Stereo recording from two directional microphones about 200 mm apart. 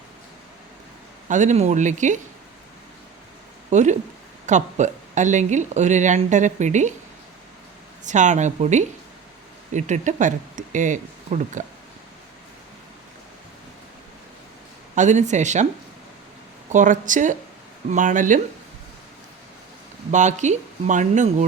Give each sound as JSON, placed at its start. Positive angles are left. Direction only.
{"t": 1.3, "sound": "speech", "side_deg": -35}
{"t": 3.7, "sound": "speech", "side_deg": -35}
{"t": 8.0, "sound": "speech", "side_deg": -35}
{"t": 14.9, "sound": "speech", "side_deg": -35}
{"t": 16.6, "sound": "speech", "side_deg": -40}
{"t": 20.1, "sound": "speech", "side_deg": -35}